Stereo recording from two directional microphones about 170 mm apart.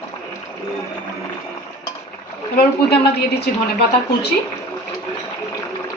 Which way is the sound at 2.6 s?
70° left (ahead or behind).